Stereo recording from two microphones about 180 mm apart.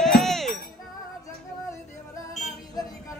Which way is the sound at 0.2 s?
Centre (ahead or behind).